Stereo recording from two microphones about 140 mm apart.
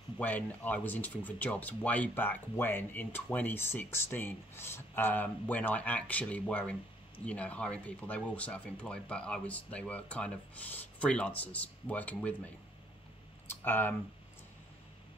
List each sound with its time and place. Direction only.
0.2 s speech: 10° left (ahead or behind)
13.5 s speech: 15° left (ahead or behind)